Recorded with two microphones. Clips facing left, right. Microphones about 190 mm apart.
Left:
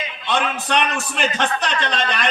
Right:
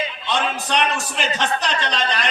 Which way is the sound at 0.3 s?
60° left (ahead or behind).